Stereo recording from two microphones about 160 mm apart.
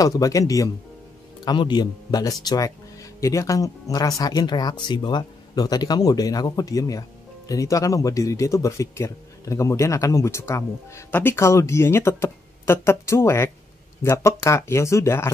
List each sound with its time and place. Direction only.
0.0 s speech: 20° left (ahead or behind)